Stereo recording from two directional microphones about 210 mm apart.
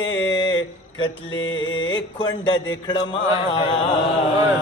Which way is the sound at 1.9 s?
20° left (ahead or behind).